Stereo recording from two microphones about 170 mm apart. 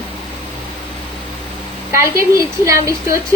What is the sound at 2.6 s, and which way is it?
Speech, 20° right (ahead or behind).